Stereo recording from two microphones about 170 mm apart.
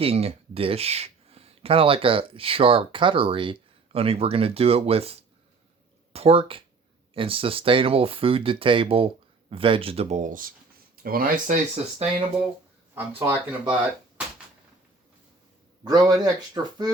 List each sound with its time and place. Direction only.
0.0 s speech: 35° right (ahead or behind)
6.1 s speech: 35° right (ahead or behind)
12.9 s speech: 15° right (ahead or behind)
15.8 s speech: 25° right (ahead or behind)